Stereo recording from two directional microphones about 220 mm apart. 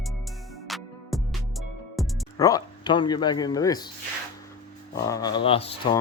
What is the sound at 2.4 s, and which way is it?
Speech, 15° left (ahead or behind).